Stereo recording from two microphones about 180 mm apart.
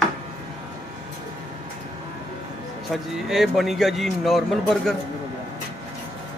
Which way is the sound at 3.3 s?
Centre (ahead or behind).